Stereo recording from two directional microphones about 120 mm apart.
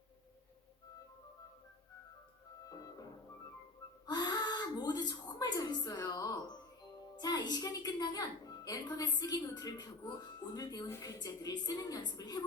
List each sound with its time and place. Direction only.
2.6 s music: 30° left (ahead or behind)
4.0 s a sound: 35° left (ahead or behind)
7.2 s a woman's voice: 35° left (ahead or behind)